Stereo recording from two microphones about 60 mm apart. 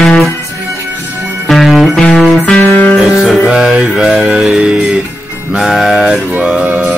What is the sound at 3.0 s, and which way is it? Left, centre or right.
Music, centre.